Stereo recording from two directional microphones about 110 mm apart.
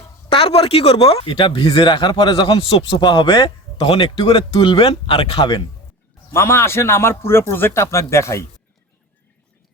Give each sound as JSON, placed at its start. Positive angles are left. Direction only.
{"t": 0.3, "sound": "speech", "side_deg": 60}
{"t": 6.3, "sound": "speech", "side_deg": 25}